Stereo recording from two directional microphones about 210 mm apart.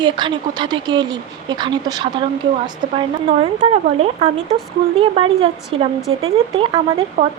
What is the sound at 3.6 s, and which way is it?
Speech, 30° right (ahead or behind).